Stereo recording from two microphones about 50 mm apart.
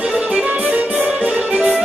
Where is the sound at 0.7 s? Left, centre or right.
Right.